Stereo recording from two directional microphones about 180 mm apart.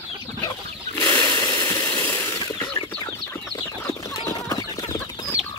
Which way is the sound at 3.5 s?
20° left (ahead or behind).